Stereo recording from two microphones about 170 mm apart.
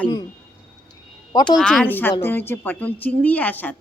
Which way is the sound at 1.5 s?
5° left (ahead or behind).